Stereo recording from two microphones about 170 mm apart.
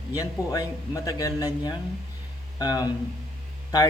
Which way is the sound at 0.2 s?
20° left (ahead or behind).